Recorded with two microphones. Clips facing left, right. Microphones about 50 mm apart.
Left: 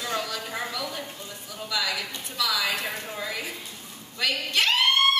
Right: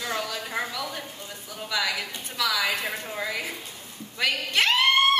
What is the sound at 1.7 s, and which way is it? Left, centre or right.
A woman's voice, right.